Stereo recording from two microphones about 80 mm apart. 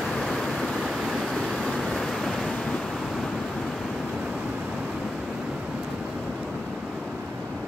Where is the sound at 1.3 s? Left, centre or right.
Centre.